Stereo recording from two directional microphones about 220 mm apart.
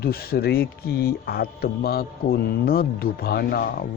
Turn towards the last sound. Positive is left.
turn(degrees=40)  # may be behind; listen again after turning